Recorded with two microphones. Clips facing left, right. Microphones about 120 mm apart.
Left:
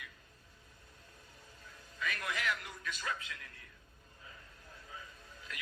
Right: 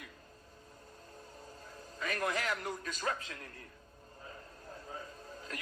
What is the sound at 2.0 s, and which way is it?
A man's voice, 40° right (ahead or behind).